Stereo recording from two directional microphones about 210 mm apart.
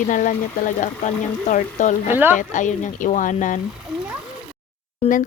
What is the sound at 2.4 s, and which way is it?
Speech, 35° left (ahead or behind).